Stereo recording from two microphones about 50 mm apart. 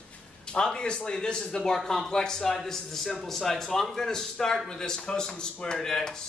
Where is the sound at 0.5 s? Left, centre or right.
Centre.